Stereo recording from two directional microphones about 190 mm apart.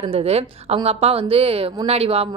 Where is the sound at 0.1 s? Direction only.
35° right (ahead or behind).